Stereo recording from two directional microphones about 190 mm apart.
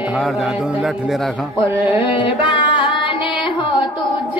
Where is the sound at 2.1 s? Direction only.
25° left (ahead or behind).